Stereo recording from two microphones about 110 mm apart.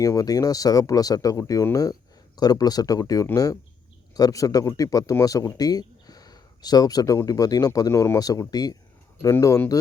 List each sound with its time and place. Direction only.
0.0 s speech: 30° left (ahead or behind)